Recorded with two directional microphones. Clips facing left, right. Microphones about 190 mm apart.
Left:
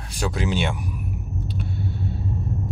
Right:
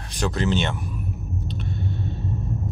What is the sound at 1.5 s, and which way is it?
Rumble, 10° left (ahead or behind).